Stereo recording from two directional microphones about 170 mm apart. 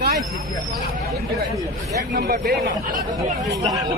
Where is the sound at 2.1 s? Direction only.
60° right (ahead or behind).